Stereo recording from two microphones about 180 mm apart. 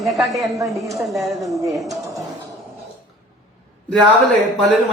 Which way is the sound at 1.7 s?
Centre (ahead or behind).